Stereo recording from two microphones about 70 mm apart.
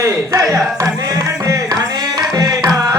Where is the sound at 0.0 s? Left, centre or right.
Right.